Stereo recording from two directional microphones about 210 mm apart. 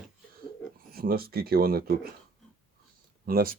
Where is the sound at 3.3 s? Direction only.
45° right (ahead or behind).